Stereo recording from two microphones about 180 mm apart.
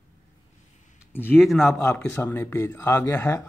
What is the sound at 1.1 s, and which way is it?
Speech, 10° left (ahead or behind).